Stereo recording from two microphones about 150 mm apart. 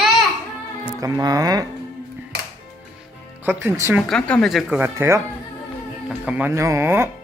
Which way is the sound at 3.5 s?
15° right (ahead or behind).